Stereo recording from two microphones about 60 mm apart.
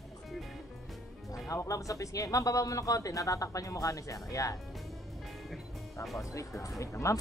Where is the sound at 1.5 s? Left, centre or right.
Left.